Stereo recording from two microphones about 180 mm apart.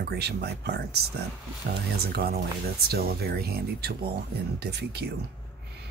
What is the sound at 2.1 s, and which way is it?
Speech, 60° right (ahead or behind).